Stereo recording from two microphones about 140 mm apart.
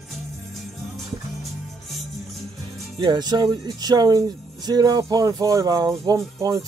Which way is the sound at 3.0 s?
30° right (ahead or behind).